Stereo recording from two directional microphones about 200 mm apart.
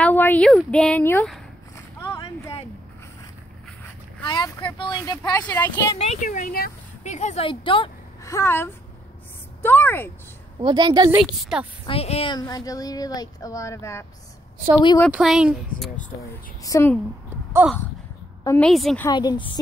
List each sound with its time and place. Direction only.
0.0 s speech: 10° left (ahead or behind)
2.0 s a sound: 15° left (ahead or behind)
4.2 s speech: 20° left (ahead or behind)
5.4 s speech: 10° left (ahead or behind)
5.9 s speech: 35° left (ahead or behind)
8.3 s speech: 15° left (ahead or behind)
10.6 s a woman's voice: 20° right (ahead or behind)
11.8 s speech: 30° left (ahead or behind)
15.0 s speech: 5° right (ahead or behind)
16.6 s speech: 15° left (ahead or behind)
17.6 s a sound: 5° right (ahead or behind)
18.4 s a woman's voice: 15° left (ahead or behind)
18.7 s speech: centre (ahead or behind)
19.0 s speech: 20° left (ahead or behind)